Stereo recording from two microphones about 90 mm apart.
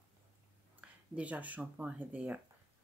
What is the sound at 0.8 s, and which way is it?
Speech, 15° right (ahead or behind).